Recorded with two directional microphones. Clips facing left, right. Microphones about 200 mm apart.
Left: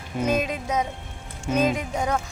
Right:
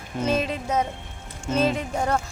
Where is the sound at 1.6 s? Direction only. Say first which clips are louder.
Even; 10° left (ahead or behind).